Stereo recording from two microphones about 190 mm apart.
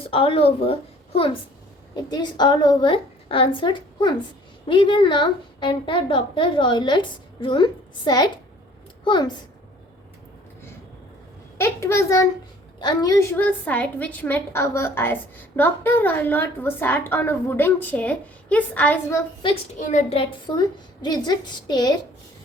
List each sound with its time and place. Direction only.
0.1 s a woman's voice: 30° left (ahead or behind)
11.5 s a child's voice: 15° left (ahead or behind)
19.4 s a child's voice: 25° left (ahead or behind)
19.8 s a woman's voice: 40° left (ahead or behind); by 21.9 s 20° left (ahead or behind)